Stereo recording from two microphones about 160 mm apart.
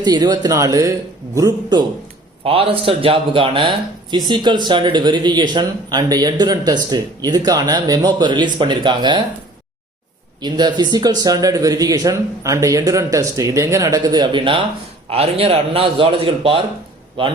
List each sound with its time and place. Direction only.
0.0 s a man's voice: 25° right (ahead or behind)
2.4 s a man's voice: 35° right (ahead or behind)
10.4 s a man's voice: 25° right (ahead or behind)